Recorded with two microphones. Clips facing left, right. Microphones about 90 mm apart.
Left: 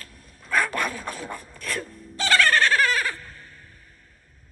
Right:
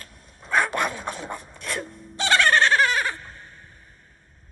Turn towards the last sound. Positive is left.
turn(degrees=-20)  # may be behind; listen again after turning